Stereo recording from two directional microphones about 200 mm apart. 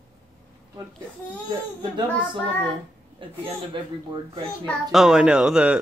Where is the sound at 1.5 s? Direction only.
25° right (ahead or behind).